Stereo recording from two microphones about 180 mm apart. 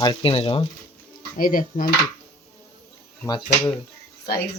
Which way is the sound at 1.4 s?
50° left (ahead or behind).